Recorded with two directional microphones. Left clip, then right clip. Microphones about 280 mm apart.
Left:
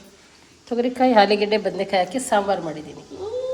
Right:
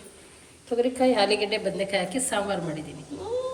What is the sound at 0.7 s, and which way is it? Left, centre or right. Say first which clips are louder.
A woman's voice: left 5 dB; left.